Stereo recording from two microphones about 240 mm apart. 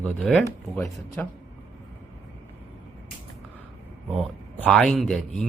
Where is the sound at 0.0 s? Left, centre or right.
Centre.